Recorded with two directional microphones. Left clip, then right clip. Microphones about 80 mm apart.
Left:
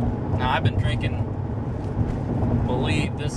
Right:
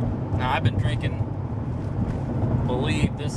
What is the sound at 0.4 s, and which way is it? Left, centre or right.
Vehicle, centre.